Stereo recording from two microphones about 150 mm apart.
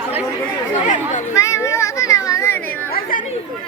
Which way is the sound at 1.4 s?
20° left (ahead or behind).